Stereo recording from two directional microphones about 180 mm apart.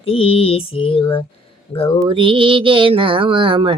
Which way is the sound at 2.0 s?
30° right (ahead or behind).